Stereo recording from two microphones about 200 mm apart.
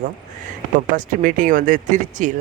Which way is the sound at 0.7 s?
40° right (ahead or behind).